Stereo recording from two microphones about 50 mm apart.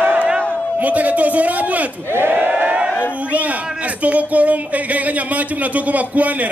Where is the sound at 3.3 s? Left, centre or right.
Right.